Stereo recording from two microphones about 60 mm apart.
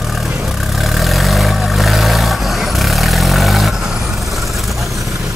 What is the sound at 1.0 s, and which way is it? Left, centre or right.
Vehicle, centre.